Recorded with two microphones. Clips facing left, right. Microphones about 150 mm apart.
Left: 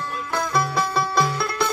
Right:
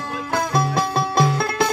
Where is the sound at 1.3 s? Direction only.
50° right (ahead or behind).